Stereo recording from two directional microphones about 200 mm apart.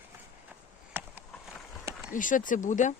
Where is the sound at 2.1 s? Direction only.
40° left (ahead or behind).